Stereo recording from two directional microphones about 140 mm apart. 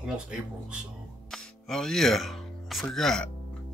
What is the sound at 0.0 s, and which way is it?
Speech, 5° right (ahead or behind).